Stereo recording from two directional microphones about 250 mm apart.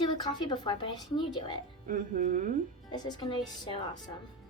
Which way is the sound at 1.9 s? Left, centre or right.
Right.